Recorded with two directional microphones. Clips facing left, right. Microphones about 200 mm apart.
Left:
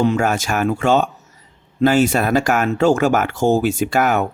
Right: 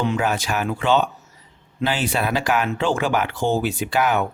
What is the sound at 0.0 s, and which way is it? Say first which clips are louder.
Speech: left 5 dB; 45° left (ahead or behind).